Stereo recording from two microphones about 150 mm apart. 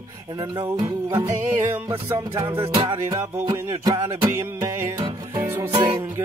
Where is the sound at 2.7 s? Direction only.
25° right (ahead or behind).